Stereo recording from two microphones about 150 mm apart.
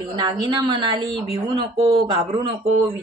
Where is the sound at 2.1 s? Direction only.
35° right (ahead or behind).